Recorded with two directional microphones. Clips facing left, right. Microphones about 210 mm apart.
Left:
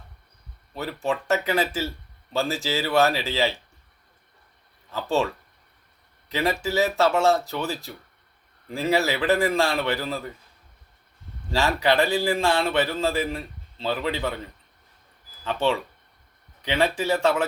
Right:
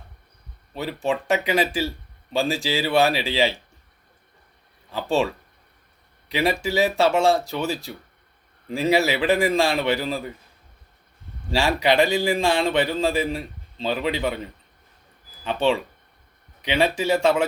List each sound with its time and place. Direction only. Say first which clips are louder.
0.7 s a man's voice: right 2 dB; 15° right (ahead or behind)
4.9 s a man's voice: right 2 dB; 15° right (ahead or behind)
11.5 s a man's voice: right 2 dB; 15° right (ahead or behind)
15.4 s a man's voice: right 2 dB; 15° right (ahead or behind)